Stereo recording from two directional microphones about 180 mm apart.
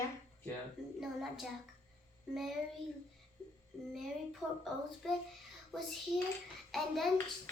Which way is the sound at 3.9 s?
Centre (ahead or behind).